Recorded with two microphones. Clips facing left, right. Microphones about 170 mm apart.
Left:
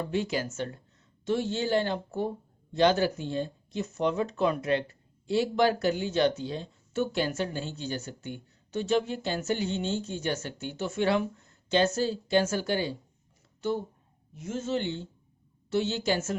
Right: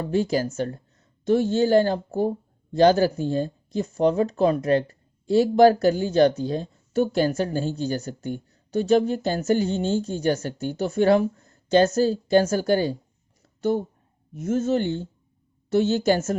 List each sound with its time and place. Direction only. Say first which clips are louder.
0.0 s a woman's voice: right 7 dB; 40° right (ahead or behind)